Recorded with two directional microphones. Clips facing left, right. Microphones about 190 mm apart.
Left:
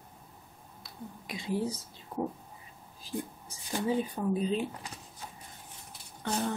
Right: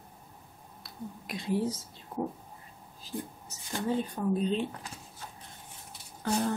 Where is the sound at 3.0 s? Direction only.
10° left (ahead or behind).